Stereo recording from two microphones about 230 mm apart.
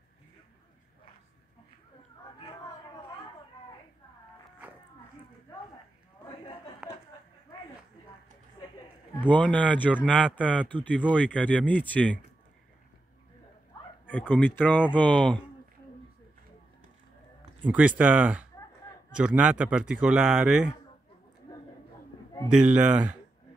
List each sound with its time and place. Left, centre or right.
6.8 s a sound: centre
9.3 s speech: centre
13.7 s a sound: centre
14.3 s speech: centre
17.6 s speech: centre
22.5 s speech: centre